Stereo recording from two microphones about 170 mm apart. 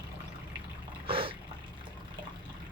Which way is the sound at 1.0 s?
30° right (ahead or behind).